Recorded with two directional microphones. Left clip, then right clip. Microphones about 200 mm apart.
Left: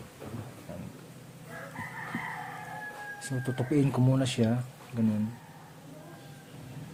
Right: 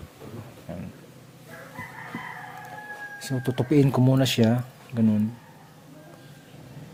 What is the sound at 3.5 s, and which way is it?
Speech, 45° right (ahead or behind).